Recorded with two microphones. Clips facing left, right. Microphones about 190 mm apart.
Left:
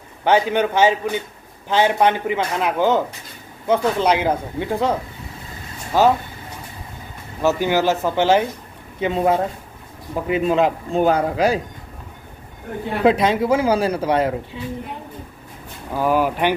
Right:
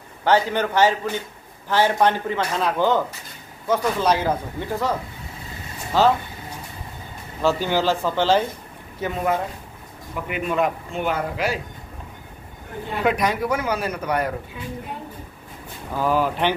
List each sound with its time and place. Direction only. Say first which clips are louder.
0.2 s a man's voice: left 2 dB; 20° left (ahead or behind)
5.9 s a man's voice: left 2 dB; 15° left (ahead or behind)
7.6 s a man's voice: left 3 dB; 15° left (ahead or behind)
9.0 s speech: left 5 dB; 25° left (ahead or behind)
13.0 s speech: left 5 dB; 25° left (ahead or behind)
15.9 s a man's voice: left 3 dB; 10° left (ahead or behind)